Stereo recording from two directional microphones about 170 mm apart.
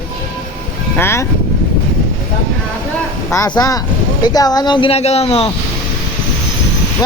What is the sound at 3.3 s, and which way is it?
Speech, 20° left (ahead or behind).